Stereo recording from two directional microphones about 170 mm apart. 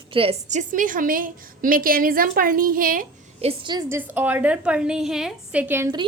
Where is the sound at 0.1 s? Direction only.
35° right (ahead or behind).